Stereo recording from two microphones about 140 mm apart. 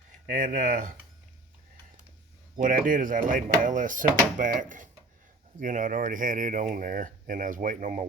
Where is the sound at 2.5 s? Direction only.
75° right (ahead or behind).